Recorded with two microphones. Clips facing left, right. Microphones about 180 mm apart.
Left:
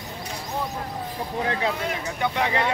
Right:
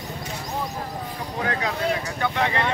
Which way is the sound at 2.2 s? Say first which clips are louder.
Left 1 dB; 10° left (ahead or behind).